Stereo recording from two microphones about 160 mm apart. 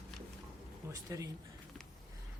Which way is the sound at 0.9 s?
20° right (ahead or behind).